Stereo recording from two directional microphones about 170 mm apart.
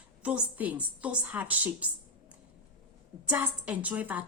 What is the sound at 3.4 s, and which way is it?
Speech, 10° right (ahead or behind).